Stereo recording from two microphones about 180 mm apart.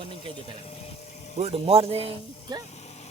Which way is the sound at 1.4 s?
35° right (ahead or behind).